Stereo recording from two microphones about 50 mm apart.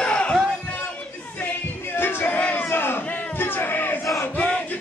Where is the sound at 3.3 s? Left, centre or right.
Left.